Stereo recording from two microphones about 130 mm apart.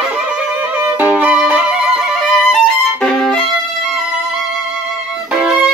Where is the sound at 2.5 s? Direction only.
Centre (ahead or behind).